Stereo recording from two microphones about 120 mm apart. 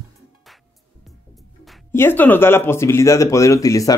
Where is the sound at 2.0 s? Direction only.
15° left (ahead or behind).